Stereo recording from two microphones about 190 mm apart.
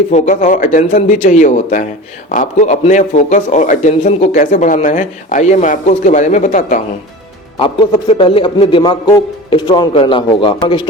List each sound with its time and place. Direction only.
0.1 s a man's voice: 40° left (ahead or behind)
7.6 s a man's voice: 25° left (ahead or behind)